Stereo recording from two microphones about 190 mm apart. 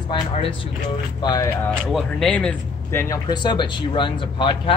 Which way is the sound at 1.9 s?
Centre (ahead or behind).